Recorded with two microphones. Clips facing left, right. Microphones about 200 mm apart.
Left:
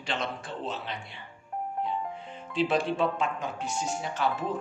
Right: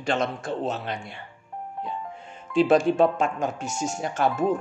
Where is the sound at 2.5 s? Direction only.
45° right (ahead or behind).